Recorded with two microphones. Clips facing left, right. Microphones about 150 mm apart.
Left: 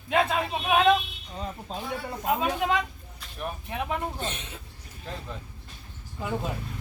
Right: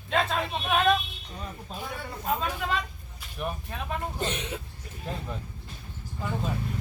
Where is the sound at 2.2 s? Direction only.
15° left (ahead or behind).